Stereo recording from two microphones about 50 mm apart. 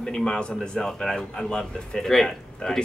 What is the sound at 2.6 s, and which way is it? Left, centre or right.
Speech, left.